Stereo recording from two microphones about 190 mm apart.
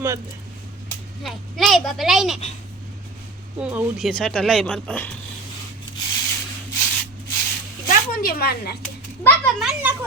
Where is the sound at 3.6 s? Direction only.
5° right (ahead or behind).